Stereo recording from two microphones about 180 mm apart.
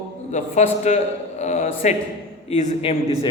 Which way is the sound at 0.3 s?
40° left (ahead or behind).